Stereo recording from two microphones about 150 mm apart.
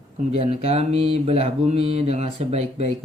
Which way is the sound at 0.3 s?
45° right (ahead or behind).